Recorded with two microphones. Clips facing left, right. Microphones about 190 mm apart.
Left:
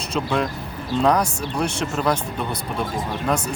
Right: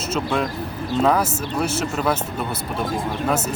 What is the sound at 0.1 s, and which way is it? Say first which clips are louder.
Speech: even; centre (ahead or behind).